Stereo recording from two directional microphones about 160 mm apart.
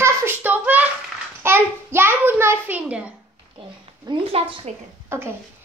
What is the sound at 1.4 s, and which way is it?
A child's voice, 15° right (ahead or behind).